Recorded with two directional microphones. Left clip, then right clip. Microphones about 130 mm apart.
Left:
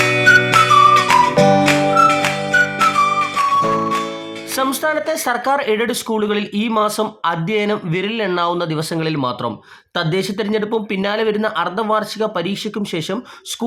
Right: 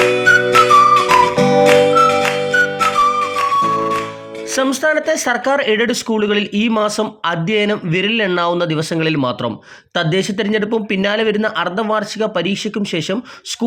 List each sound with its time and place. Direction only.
0.2 s music: centre (ahead or behind)
4.5 s speech: 20° right (ahead or behind)